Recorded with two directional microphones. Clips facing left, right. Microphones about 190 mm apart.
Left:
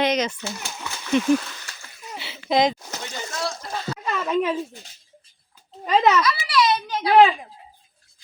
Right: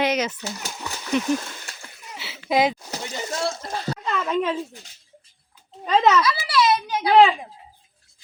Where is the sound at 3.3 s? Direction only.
25° right (ahead or behind).